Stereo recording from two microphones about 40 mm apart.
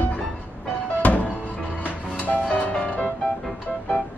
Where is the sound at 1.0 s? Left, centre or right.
Left.